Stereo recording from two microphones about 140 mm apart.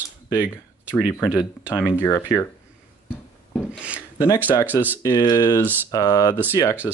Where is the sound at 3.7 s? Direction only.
10° right (ahead or behind).